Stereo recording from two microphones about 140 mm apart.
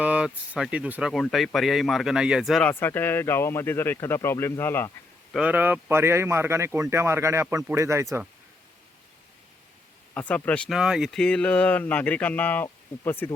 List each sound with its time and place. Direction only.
0.0 s speech: 10° right (ahead or behind)
2.6 s speech: 15° left (ahead or behind)
5.3 s speech: 10° right (ahead or behind)
10.2 s speech: 10° left (ahead or behind)
10.7 s speech: 5° right (ahead or behind); by 13.3 s 15° left (ahead or behind)